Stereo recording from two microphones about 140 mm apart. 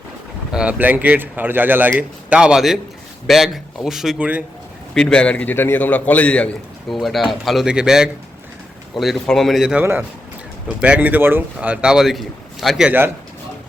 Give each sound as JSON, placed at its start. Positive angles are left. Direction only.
{"t": 0.5, "sound": "speech", "side_deg": -10}
{"t": 4.9, "sound": "a man's voice", "side_deg": 5}
{"t": 9.8, "sound": "speech", "side_deg": -15}